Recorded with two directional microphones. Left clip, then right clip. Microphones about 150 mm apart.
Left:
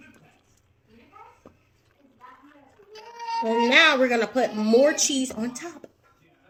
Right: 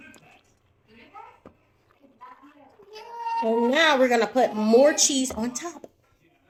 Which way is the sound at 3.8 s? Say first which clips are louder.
Left 2 dB; 25° left (ahead or behind).